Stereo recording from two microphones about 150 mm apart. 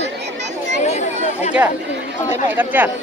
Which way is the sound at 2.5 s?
10° right (ahead or behind).